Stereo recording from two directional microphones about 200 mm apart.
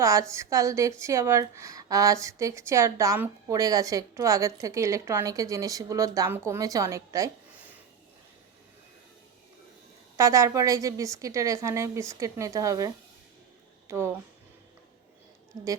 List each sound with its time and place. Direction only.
0.0 s a woman's voice: 15° right (ahead or behind)
10.2 s a woman's voice: 15° right (ahead or behind)